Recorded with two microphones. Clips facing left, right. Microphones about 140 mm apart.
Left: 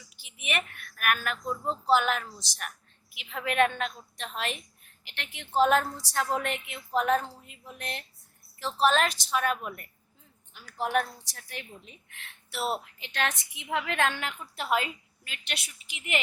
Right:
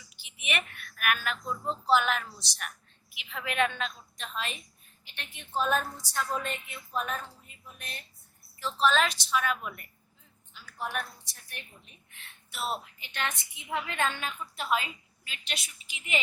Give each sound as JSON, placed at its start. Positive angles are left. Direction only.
{"t": 0.3, "sound": "a woman's voice", "side_deg": 45}
{"t": 5.0, "sound": "a woman's voice", "side_deg": 90}
{"t": 8.6, "sound": "a woman's voice", "side_deg": 55}
{"t": 10.5, "sound": "a woman's voice", "side_deg": 65}
{"t": 13.0, "sound": "a woman's voice", "side_deg": 90}